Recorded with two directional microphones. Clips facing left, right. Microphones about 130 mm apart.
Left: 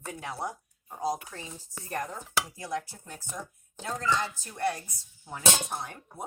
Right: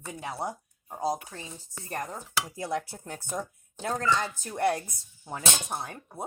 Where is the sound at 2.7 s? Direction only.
60° right (ahead or behind).